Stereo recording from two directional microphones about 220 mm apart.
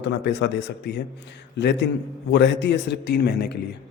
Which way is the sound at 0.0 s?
50° left (ahead or behind).